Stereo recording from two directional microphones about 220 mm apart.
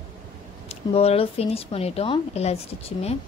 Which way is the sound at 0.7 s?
25° left (ahead or behind).